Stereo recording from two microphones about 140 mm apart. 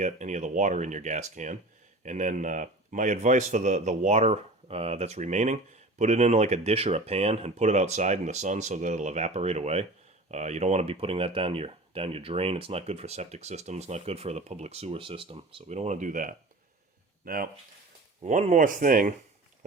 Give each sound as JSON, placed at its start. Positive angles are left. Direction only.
{"t": 0.0, "sound": "speech", "side_deg": -55}
{"t": 17.2, "sound": "speech", "side_deg": -90}
{"t": 18.2, "sound": "speech", "side_deg": -55}